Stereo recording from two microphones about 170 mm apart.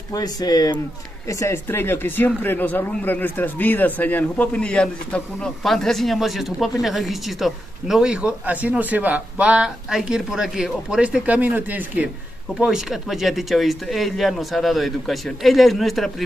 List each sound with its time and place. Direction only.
0.1 s speech: 20° left (ahead or behind); by 16.3 s centre (ahead or behind)